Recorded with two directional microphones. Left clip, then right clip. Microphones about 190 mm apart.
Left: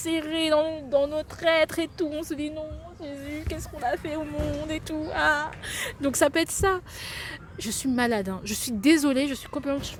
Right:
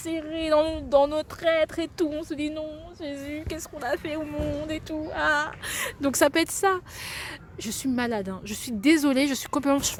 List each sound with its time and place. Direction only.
0.0 s speech: 10° left (ahead or behind)
0.6 s speech: 25° right (ahead or behind)
1.4 s speech: centre (ahead or behind)
2.6 s a woman's voice: 35° right (ahead or behind)
3.2 s a woman's voice: 20° right (ahead or behind)
9.3 s a woman's voice: 35° right (ahead or behind)